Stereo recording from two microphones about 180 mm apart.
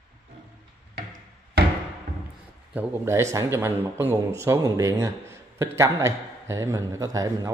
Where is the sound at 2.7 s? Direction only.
10° right (ahead or behind).